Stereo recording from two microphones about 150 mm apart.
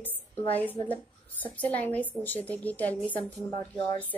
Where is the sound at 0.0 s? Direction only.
10° left (ahead or behind).